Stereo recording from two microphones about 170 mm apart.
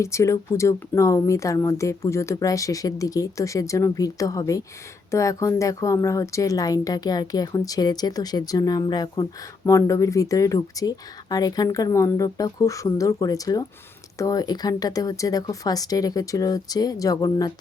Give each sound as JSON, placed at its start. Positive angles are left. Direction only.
{"t": 0.0, "sound": "speech", "side_deg": 15}